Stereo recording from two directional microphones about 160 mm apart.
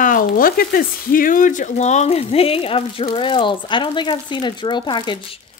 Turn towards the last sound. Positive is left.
turn(degrees=30)  # may be behind; listen again after turning